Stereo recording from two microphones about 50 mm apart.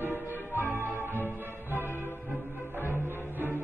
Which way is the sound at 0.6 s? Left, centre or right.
Left.